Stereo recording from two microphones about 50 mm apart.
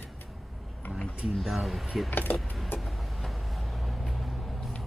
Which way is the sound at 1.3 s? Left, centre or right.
Centre.